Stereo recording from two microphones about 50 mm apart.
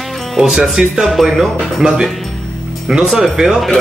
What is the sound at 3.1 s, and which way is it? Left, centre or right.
Speech, centre.